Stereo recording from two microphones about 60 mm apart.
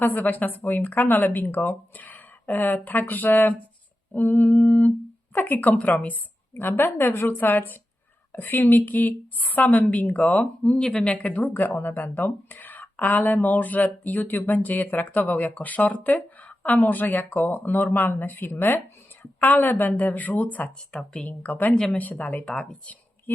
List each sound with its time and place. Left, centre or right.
0.0 s speech: left
2.0 s a sound: left
2.5 s a woman's voice: left
10.8 s speech: centre
11.1 s a woman's voice: left
20.9 s speech: centre
21.9 s a woman's voice: left